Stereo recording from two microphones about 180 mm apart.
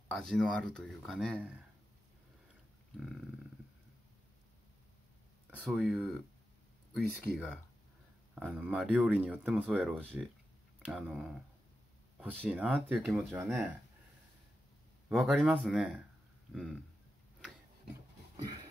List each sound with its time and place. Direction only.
0.1 s speech: 5° left (ahead or behind)
3.0 s speech: centre (ahead or behind)
5.6 s speech: centre (ahead or behind)
8.4 s speech: 5° right (ahead or behind)
12.4 s speech: 5° right (ahead or behind)
15.0 s speech: 5° right (ahead or behind)
18.3 s a sound: 25° right (ahead or behind)